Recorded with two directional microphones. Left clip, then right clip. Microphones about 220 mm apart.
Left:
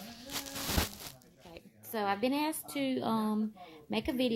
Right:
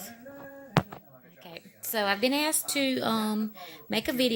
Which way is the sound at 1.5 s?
25° right (ahead or behind).